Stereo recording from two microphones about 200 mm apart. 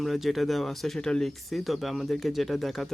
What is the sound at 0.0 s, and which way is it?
Speech, centre (ahead or behind).